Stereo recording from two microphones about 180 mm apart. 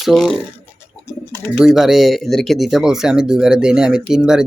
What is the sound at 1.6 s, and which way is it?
Speech, centre (ahead or behind).